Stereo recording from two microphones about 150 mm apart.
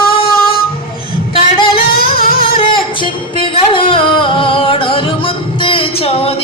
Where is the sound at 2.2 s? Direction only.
75° left (ahead or behind).